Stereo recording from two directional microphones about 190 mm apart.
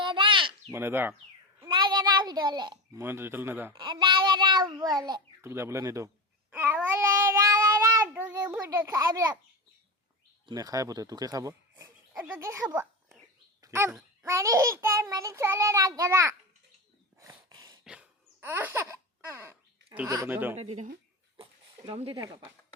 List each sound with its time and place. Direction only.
0.0 s a sound: 25° right (ahead or behind)
0.7 s a child's voice: 10° right (ahead or behind)
1.6 s a child's voice: 25° right (ahead or behind)
3.8 s a child's voice: 25° right (ahead or behind)
6.5 s child singing: 10° right (ahead or behind)
10.4 s speech: 20° right (ahead or behind)
13.6 s a sound: 15° right (ahead or behind)
14.3 s a child's voice: 15° right (ahead or behind)
17.2 s a sound: 20° right (ahead or behind)
17.8 s laughter: 5° right (ahead or behind)
20.1 s a child's voice: 15° right (ahead or behind)
20.6 s speech: 35° right (ahead or behind)